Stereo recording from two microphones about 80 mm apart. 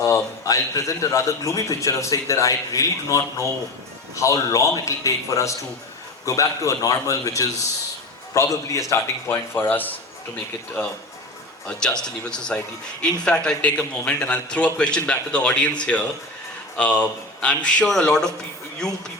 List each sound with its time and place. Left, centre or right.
0.0 s a man's voice: left
9.6 s a man's voice: left
12.0 s a man's voice: centre